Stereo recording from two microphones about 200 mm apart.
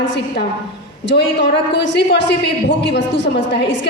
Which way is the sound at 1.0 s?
60° left (ahead or behind).